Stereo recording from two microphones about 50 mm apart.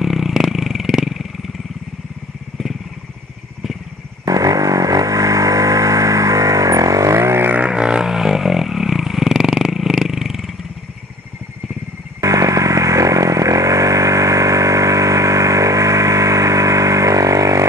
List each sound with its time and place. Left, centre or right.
0.0 s vehicle: centre
5.0 s vehicle: right
7.6 s a sound: centre
12.2 s vehicle: right